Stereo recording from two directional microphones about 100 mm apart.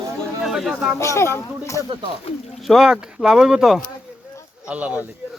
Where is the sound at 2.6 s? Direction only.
5° right (ahead or behind).